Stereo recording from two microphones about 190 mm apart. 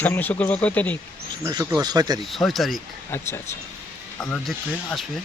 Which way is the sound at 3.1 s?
15° left (ahead or behind).